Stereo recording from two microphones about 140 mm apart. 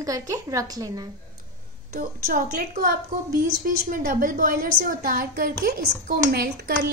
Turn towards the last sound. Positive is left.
turn(degrees=-90)